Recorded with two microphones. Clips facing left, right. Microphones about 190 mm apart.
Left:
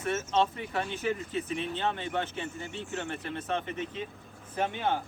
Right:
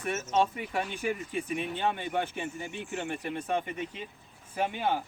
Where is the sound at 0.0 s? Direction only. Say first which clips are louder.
Even; 10° right (ahead or behind).